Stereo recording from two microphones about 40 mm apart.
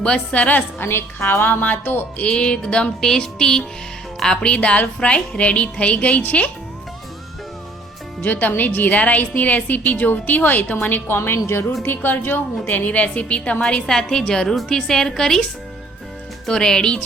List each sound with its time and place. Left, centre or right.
0.0 s a woman's voice: left
0.8 s a woman's voice: left
1.6 s a woman's voice: left
2.2 s a woman's voice: left
3.0 s music: centre
4.2 s a woman's voice: centre; by 6.5 s left
8.2 s a woman's voice: left
11.1 s a woman's voice: left
11.8 s a woman's voice: left
13.8 s music: centre
14.4 s a woman's voice: centre
14.7 s music: centre
16.5 s music: centre